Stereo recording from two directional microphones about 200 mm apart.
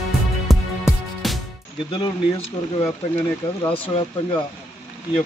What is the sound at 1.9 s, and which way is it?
Speech, 25° left (ahead or behind).